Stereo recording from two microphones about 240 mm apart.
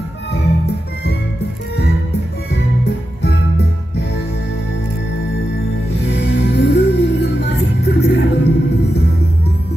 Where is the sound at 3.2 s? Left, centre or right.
Left.